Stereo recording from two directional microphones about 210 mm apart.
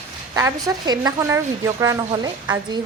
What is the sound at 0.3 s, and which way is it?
A woman's voice, 15° right (ahead or behind).